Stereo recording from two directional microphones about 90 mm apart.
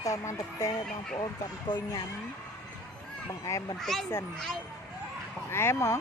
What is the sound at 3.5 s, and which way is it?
Speech, 35° left (ahead or behind).